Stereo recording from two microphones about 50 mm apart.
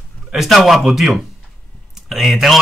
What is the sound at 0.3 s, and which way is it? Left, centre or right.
Speech, centre.